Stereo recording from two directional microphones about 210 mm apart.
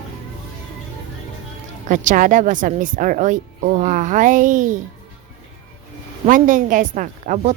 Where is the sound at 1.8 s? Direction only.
35° right (ahead or behind).